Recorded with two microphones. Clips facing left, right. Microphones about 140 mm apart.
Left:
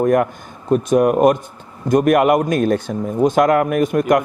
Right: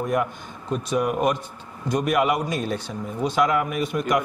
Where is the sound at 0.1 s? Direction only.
50° left (ahead or behind).